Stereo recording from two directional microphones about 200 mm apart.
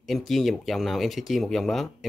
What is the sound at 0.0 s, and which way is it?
A man's voice, centre (ahead or behind).